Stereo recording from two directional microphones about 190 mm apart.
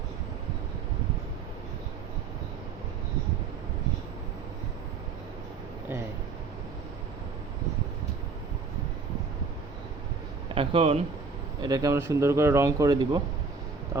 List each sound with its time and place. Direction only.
10.5 s a man's voice: 30° right (ahead or behind)
11.6 s speech: 20° right (ahead or behind)